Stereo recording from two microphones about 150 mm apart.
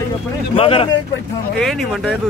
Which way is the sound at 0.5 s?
40° left (ahead or behind).